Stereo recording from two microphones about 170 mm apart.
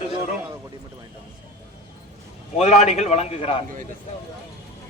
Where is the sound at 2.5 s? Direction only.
40° left (ahead or behind).